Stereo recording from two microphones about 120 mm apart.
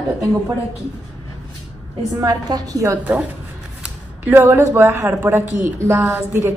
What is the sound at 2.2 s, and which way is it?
Speech, 30° right (ahead or behind).